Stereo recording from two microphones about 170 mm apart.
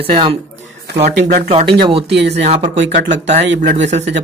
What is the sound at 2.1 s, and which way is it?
Speech, 85° right.